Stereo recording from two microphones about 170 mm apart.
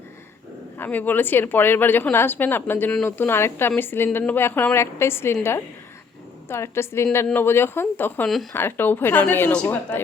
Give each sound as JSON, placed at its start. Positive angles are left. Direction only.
{"t": 0.8, "sound": "a woman's voice", "side_deg": 10}